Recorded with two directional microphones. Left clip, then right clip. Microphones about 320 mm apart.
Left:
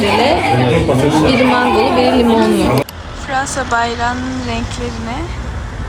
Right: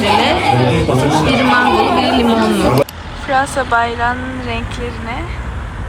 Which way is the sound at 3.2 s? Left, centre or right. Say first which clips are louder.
Right 3 dB; centre.